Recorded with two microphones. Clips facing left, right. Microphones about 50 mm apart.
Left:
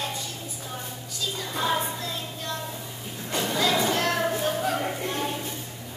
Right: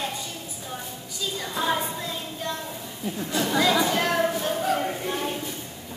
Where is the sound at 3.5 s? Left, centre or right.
Centre.